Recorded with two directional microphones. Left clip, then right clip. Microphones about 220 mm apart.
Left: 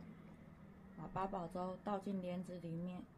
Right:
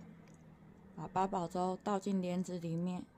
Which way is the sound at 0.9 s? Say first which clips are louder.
Right 8 dB; 50° right (ahead or behind).